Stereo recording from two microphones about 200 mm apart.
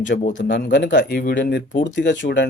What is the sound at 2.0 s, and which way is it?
Speech, 60° left (ahead or behind).